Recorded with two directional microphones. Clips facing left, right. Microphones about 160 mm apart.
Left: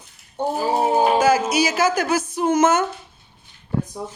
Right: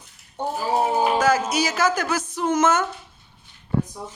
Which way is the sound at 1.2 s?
10° left (ahead or behind).